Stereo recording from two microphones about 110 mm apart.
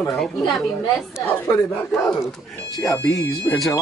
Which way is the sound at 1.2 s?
25° left (ahead or behind).